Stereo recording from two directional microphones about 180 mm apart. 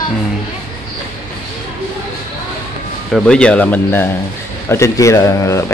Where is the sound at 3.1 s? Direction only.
Centre (ahead or behind).